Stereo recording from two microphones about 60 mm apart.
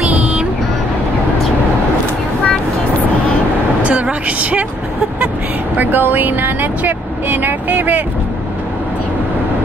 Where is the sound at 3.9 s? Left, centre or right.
Right.